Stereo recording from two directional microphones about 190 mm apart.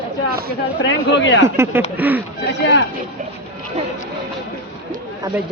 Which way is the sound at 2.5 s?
65° left (ahead or behind).